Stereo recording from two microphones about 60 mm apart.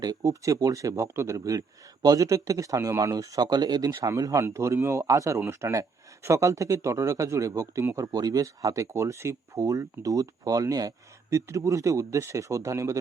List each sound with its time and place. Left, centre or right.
0.0 s a man's voice: right
4.2 s a man's voice: right
4.4 s a man's voice: right
5.5 s a man's voice: right
6.2 s speech: right
7.9 s a man's voice: right
8.9 s a man's voice: right
11.3 s speech: right